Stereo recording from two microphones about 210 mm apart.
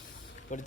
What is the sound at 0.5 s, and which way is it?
Speech, 35° left (ahead or behind).